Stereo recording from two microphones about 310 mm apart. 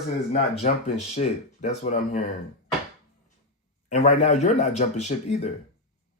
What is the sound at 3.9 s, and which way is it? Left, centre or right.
Speech, left.